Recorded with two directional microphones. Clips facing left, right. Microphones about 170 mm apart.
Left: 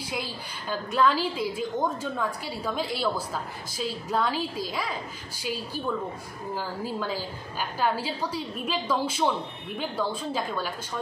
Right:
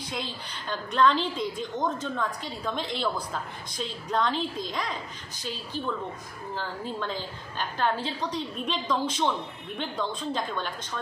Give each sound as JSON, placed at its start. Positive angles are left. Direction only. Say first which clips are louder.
{"t": 0.0, "sound": "a woman's voice", "louder": "left 1 dB", "side_deg": 10}
{"t": 6.5, "sound": "a woman's voice", "louder": "left 2 dB", "side_deg": 5}